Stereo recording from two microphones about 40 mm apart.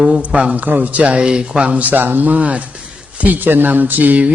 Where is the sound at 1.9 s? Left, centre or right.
Right.